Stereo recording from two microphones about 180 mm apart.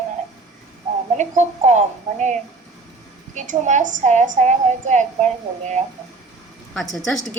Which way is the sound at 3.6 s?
45° right (ahead or behind).